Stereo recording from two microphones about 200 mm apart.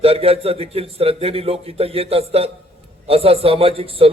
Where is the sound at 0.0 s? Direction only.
30° right (ahead or behind).